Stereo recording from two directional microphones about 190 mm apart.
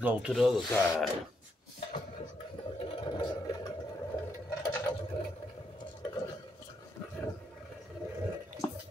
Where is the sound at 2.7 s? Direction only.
25° left (ahead or behind).